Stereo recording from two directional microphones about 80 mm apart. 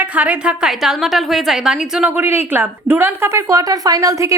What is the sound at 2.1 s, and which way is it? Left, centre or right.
A woman's voice, right.